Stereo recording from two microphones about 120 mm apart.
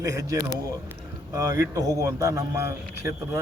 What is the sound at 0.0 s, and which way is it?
A man's voice, 30° right (ahead or behind).